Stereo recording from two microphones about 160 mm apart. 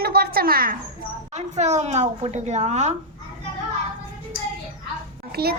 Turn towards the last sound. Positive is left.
turn(degrees=-75)  # may be behind; listen again after turning